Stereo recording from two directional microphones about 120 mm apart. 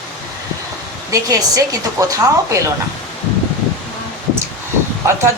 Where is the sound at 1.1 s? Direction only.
30° right (ahead or behind).